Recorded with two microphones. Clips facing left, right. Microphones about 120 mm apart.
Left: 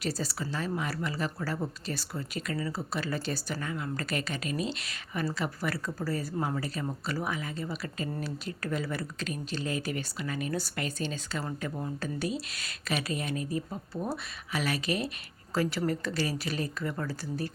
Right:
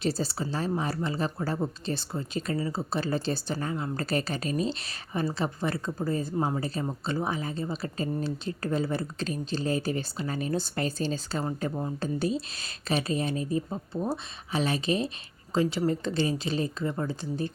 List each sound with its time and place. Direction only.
0.0 s speech: 30° right (ahead or behind)